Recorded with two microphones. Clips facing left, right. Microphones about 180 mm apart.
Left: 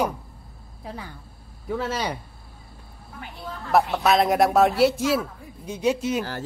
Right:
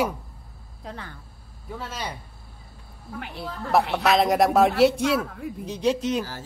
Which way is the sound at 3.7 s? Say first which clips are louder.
Left 1 dB; centre (ahead or behind).